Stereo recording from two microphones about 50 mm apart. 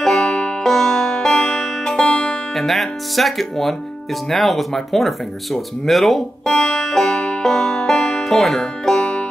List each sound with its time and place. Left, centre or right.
0.0 s music: centre
2.5 s speech: centre
6.5 s music: centre